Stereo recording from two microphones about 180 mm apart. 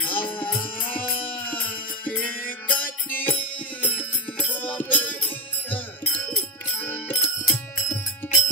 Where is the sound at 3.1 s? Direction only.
10° left (ahead or behind).